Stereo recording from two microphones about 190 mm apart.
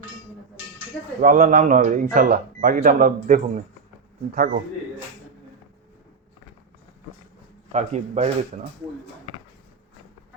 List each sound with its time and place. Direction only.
1.2 s speech: 45° right (ahead or behind)
4.3 s a man's voice: 55° right (ahead or behind)
7.7 s a man's voice: 35° right (ahead or behind)